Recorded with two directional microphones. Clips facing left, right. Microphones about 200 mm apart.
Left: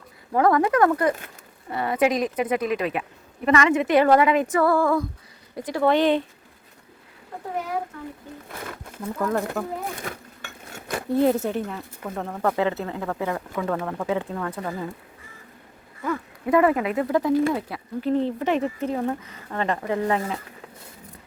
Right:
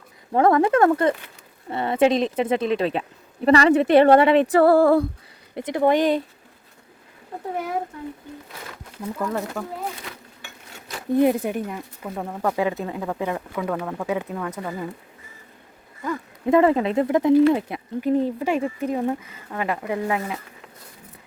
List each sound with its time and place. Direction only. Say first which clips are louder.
0.3 s a woman's voice: right 2 dB; 25° right (ahead or behind)
5.5 s speech: right 1 dB; 20° right (ahead or behind)
9.1 s speech: left 2 dB; 5° right (ahead or behind)
10.0 s dishes: left 4 dB; 50° left (ahead or behind)
11.1 s speech: right 2 dB; 15° right (ahead or behind)
16.5 s a woman's voice: right 2 dB; 25° right (ahead or behind)
18.2 s speech: right 1 dB; 10° right (ahead or behind)